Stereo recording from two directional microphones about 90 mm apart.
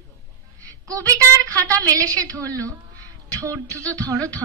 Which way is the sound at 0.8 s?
40° right (ahead or behind).